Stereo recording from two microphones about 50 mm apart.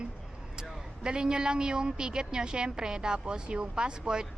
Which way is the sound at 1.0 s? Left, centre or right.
Centre.